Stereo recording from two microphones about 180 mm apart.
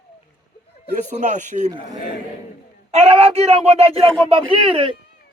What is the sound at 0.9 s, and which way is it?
Speech, 45° right (ahead or behind).